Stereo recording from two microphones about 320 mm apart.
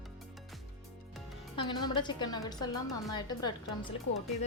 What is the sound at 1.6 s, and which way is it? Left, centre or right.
A woman's voice, centre.